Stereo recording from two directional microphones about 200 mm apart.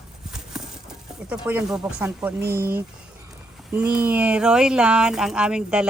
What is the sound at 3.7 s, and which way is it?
Speech, 5° right (ahead or behind).